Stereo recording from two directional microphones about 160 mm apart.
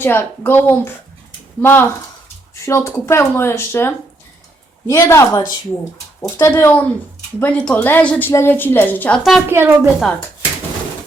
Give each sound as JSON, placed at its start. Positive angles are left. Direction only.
{"t": 0.0, "sound": "speech", "side_deg": 15}
{"t": 9.5, "sound": "a woman's voice", "side_deg": -15}